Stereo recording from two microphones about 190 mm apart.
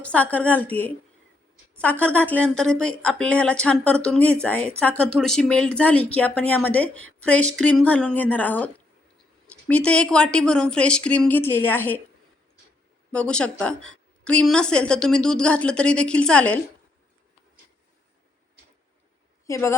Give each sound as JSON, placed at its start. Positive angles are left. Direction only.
{"t": 0.0, "sound": "a woman's voice", "side_deg": 5}
{"t": 13.1, "sound": "a woman's voice", "side_deg": 5}
{"t": 19.5, "sound": "speech", "side_deg": 15}